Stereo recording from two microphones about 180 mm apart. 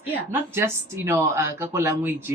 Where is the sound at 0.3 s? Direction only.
15° right (ahead or behind).